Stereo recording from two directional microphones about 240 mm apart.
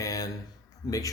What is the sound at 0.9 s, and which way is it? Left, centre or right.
Speech, centre.